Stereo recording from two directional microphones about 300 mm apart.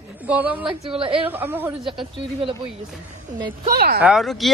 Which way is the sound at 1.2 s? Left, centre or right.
Centre.